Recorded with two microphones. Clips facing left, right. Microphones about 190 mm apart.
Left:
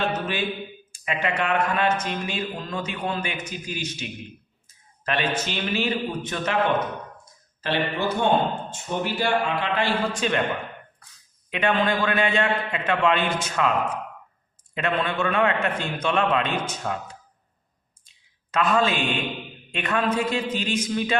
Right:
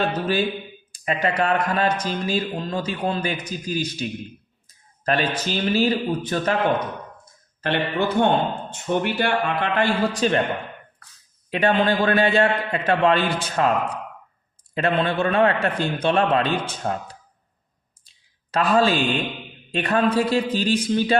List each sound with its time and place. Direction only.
0.1 s a man's voice: 35° right (ahead or behind)
7.6 s a man's voice: 55° right (ahead or behind); by 10.4 s 35° right (ahead or behind)
11.5 s a man's voice: 35° right (ahead or behind)
14.8 s a man's voice: 35° right (ahead or behind)
18.5 s a man's voice: 35° right (ahead or behind)